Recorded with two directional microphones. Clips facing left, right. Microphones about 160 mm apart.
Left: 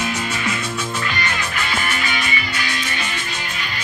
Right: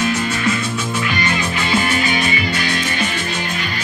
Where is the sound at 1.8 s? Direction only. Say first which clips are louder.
Right 6 dB; 30° right (ahead or behind).